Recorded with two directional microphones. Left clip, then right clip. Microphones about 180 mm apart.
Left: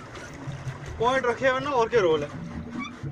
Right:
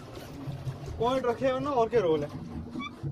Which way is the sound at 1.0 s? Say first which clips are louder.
Left 4 dB; 5° left (ahead or behind).